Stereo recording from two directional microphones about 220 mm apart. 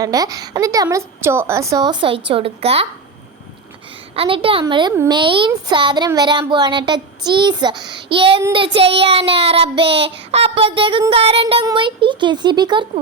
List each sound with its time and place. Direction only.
0.0 s speech: 15° right (ahead or behind)
2.3 s child singing: 25° right (ahead or behind)
4.1 s child singing: 25° right (ahead or behind)